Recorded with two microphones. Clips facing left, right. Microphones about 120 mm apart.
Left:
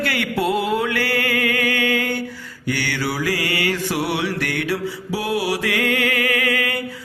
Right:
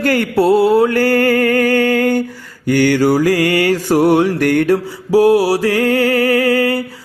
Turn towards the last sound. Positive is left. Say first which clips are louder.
# right 9 dB
turn(degrees=-35)  # may be behind; listen again after turning